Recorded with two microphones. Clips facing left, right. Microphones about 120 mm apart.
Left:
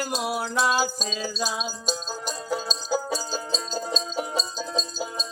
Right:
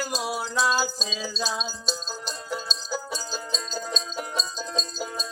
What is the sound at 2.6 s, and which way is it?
Music, 40° left (ahead or behind).